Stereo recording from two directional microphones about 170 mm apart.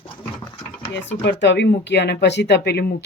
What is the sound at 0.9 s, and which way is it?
Speech, 90° left.